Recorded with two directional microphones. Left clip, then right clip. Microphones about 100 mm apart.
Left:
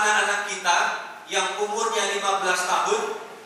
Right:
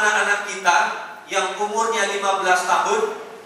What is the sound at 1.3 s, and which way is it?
A man's voice, 15° right (ahead or behind).